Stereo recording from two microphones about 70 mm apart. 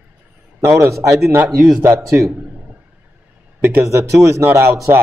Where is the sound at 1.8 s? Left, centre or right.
Right.